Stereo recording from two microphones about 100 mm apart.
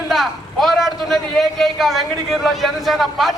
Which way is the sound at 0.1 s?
Centre (ahead or behind).